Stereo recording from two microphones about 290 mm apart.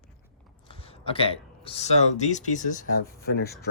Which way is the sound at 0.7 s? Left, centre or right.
Centre.